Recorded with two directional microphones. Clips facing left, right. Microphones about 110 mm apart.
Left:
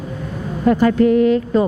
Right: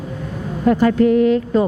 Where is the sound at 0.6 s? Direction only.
20° left (ahead or behind).